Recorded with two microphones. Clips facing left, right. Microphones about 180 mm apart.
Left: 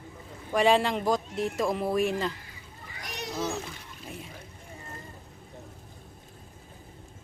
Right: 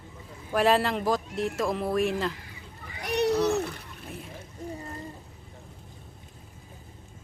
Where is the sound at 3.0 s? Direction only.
65° right (ahead or behind).